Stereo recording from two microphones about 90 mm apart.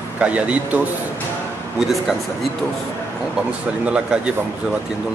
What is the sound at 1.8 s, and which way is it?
Speech, centre (ahead or behind).